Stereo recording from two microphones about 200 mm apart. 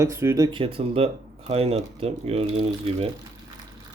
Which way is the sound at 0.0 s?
15° right (ahead or behind).